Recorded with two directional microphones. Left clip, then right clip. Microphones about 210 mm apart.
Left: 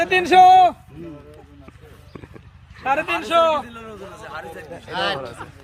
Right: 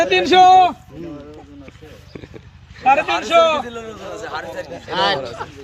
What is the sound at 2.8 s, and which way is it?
Speech, 5° left (ahead or behind).